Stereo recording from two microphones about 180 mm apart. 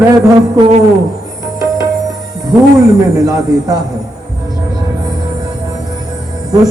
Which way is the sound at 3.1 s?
20° right (ahead or behind).